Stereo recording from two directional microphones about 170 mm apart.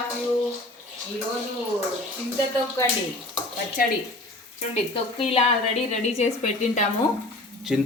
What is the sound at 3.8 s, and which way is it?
Speech, 60° left (ahead or behind).